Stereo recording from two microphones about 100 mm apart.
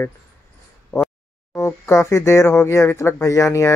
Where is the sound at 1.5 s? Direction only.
30° left (ahead or behind).